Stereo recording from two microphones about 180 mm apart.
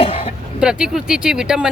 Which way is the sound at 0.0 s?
30° left (ahead or behind).